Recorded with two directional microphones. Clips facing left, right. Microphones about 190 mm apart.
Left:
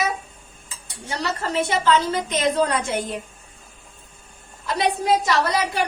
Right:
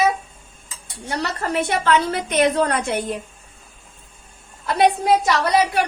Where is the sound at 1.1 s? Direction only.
60° right (ahead or behind).